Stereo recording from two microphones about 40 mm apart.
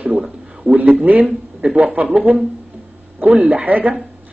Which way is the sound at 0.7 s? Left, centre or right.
Right.